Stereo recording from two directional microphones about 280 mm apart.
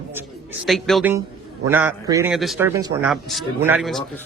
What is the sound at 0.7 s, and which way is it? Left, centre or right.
A man's voice, centre.